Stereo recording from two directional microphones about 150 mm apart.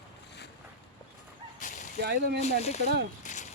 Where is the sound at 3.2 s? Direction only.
55° left (ahead or behind).